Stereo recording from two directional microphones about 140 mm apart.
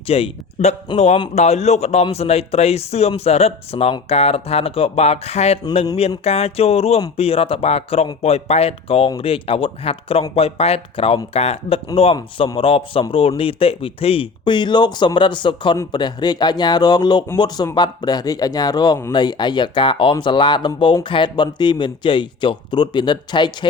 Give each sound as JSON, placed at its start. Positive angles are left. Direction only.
{"t": 0.1, "sound": "a man's voice", "side_deg": 50}